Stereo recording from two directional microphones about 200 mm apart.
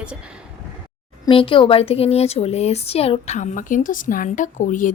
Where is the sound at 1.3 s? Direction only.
25° left (ahead or behind).